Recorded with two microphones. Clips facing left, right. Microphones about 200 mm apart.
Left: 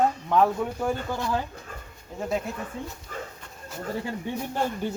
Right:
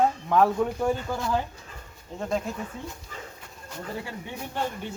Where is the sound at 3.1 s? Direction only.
50° left (ahead or behind).